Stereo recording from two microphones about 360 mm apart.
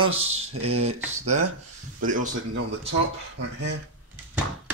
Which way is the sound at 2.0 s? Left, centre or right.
Right.